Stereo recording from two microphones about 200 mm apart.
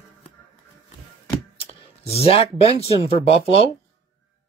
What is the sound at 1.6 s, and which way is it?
Speech, 30° left (ahead or behind).